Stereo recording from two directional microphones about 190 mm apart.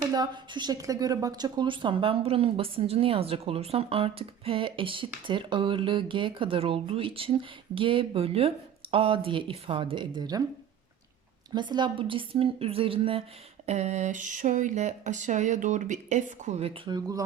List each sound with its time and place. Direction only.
0.1 s speech: 20° right (ahead or behind)
11.5 s speech: 25° right (ahead or behind)